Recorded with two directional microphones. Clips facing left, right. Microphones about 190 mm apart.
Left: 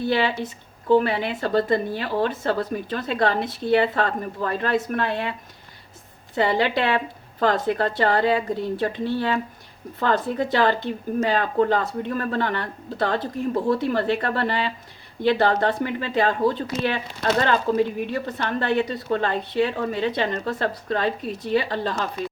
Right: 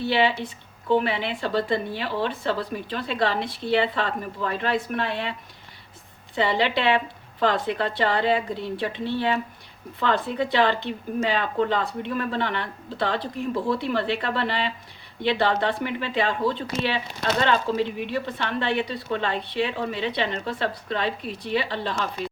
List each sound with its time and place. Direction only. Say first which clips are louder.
0.0 s speech: even; 45° left (ahead or behind)
6.3 s speech: left 2 dB; 45° left (ahead or behind)